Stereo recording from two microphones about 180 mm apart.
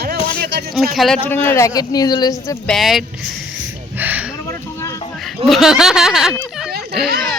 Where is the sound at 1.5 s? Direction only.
15° left (ahead or behind).